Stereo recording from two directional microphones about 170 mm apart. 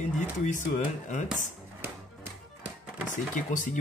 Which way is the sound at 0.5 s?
45° left (ahead or behind).